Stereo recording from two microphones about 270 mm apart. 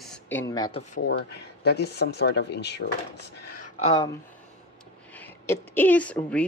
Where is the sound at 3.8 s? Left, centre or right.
Centre.